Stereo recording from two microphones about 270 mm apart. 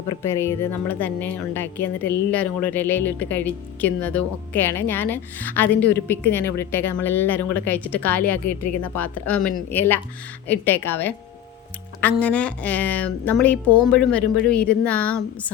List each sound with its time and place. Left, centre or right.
0.2 s speech: centre
8.4 s speech: left
8.8 s a woman's voice: centre